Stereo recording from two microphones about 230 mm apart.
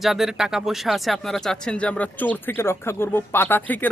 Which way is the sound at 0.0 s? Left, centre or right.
Centre.